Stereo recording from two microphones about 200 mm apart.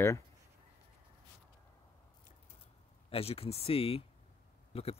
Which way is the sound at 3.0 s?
30° left (ahead or behind).